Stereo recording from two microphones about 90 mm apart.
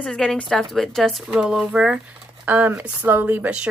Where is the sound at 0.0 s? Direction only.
5° left (ahead or behind).